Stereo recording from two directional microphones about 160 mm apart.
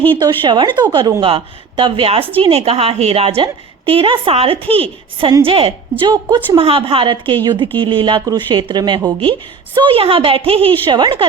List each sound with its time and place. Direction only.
0.2 s a woman's voice: 30° right (ahead or behind)
6.6 s a woman's voice: 35° right (ahead or behind)